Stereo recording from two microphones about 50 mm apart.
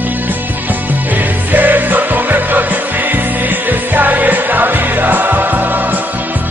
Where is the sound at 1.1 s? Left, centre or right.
Right.